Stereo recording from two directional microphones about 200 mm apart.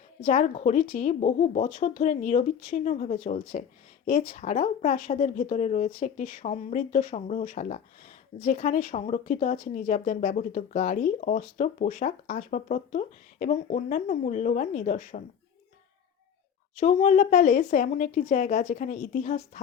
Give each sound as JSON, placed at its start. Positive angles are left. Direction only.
{"t": 0.3, "sound": "speech", "side_deg": 35}
{"t": 16.7, "sound": "speech", "side_deg": 35}